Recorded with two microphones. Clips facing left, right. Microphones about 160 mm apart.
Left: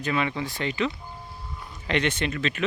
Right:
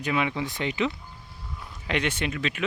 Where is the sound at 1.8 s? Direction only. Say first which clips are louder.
Left 2 dB; 5° right (ahead or behind).